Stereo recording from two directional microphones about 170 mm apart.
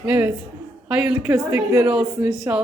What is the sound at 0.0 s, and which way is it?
A woman's voice, 10° right (ahead or behind).